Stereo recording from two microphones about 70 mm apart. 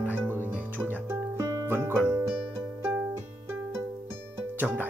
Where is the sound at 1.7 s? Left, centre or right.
Right.